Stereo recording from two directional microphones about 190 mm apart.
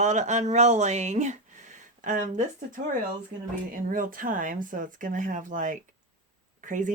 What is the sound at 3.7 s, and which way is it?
Speech, 45° right (ahead or behind).